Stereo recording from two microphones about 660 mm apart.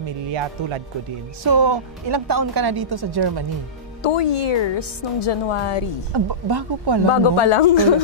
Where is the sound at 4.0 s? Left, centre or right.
Left.